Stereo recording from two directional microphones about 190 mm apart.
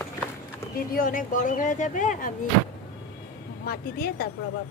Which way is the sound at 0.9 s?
45° left (ahead or behind).